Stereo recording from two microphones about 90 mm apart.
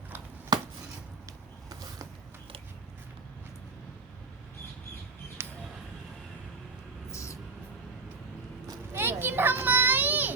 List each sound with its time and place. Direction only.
0.5 s chopping: 50° right (ahead or behind)
5.4 s a sound: 25° right (ahead or behind)
7.1 s music: 35° left (ahead or behind)
8.9 s children playing: 25° right (ahead or behind)